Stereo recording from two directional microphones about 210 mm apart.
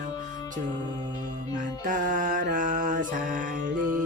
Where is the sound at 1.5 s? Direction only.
40° right (ahead or behind).